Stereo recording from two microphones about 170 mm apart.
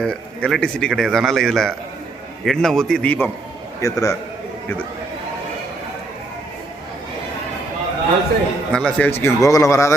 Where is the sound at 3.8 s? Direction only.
20° left (ahead or behind).